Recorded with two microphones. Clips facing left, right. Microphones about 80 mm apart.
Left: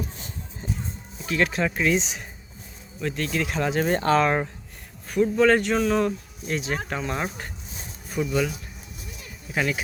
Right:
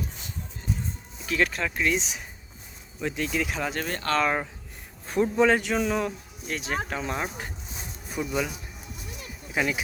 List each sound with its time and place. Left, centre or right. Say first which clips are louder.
1.2 s speech: left 2 dB; centre
3.0 s speech: left 1 dB; centre
3.8 s speech: left 8 dB; left
4.1 s speech: left 3 dB; centre
5.0 s a man's voice: left 2 dB; right
5.5 s speech: left 3 dB; centre